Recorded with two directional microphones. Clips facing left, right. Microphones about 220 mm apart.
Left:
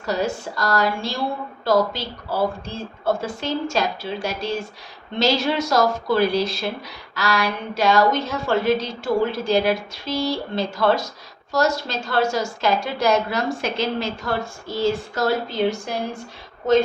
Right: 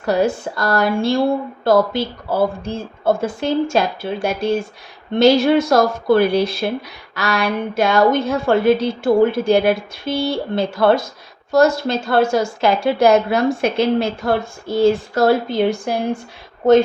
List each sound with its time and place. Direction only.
0.0 s a woman's voice: 55° right (ahead or behind)